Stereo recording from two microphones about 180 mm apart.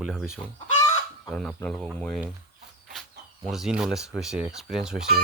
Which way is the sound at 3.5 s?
5° right (ahead or behind).